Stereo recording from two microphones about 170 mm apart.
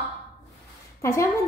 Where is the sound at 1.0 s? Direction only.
20° left (ahead or behind).